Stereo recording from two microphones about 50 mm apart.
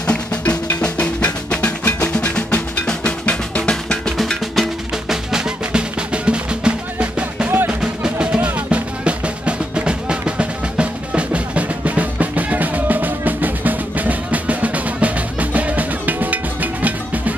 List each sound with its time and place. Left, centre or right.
0.0 s percussion: left
2.9 s drum: left
5.1 s music: centre
7.4 s music: right
7.8 s music: centre; by 17.2 s right